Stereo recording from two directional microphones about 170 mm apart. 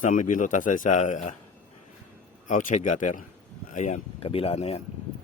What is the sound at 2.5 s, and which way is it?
A man's voice, 50° left (ahead or behind).